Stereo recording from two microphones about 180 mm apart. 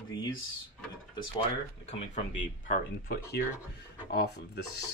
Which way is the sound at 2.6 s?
60° left (ahead or behind).